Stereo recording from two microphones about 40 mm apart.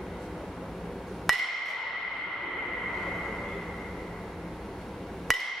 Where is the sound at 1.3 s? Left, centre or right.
Centre.